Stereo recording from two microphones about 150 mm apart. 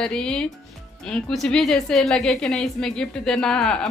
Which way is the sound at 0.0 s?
5° left (ahead or behind).